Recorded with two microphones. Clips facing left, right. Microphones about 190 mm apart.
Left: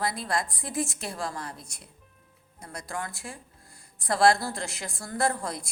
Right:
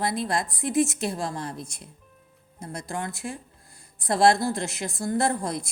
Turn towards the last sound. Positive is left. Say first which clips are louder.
# right 3 dB
turn(degrees=-20)  # may be behind; listen again after turning